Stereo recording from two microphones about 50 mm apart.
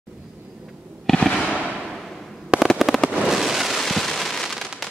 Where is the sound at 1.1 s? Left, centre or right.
Centre.